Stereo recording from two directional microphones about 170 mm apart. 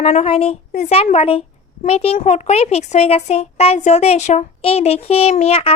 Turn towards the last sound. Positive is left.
turn(degrees=35)  # may be behind; listen again after turning